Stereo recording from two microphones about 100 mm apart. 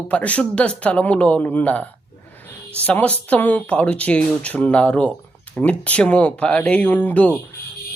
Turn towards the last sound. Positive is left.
turn(degrees=15)  # may be behind; listen again after turning